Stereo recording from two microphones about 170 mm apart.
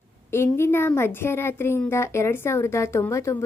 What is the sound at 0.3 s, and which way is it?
Speech, 15° left (ahead or behind).